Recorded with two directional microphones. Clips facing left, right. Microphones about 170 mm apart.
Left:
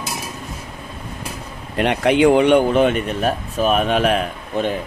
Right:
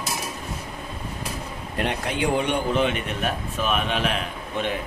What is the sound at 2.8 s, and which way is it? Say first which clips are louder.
A man's voice: left 7 dB; 40° left (ahead or behind).